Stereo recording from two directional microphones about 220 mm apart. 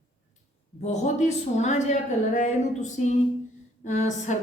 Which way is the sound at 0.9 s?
30° left (ahead or behind).